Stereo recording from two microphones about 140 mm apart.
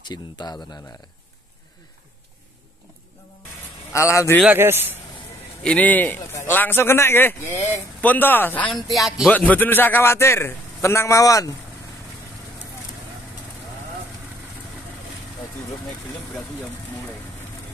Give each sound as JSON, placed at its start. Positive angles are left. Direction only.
{"t": 0.0, "sound": "speech", "side_deg": 30}
{"t": 3.9, "sound": "a man's voice", "side_deg": 20}
{"t": 4.5, "sound": "speech", "side_deg": -15}
{"t": 5.6, "sound": "a man's voice", "side_deg": 10}
{"t": 8.6, "sound": "speech", "side_deg": 30}
{"t": 8.9, "sound": "speech", "side_deg": 0}
{"t": 9.3, "sound": "a man's voice", "side_deg": 10}